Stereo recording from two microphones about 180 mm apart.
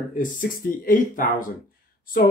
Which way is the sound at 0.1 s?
50° left (ahead or behind).